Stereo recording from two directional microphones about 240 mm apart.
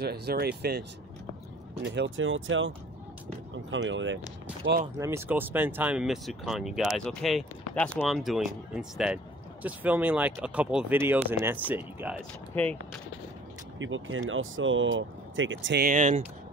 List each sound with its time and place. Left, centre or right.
0.0 s speech: right
3.7 s speech: right
4.9 s speech: centre
12.6 s speech: centre
13.7 s speech: right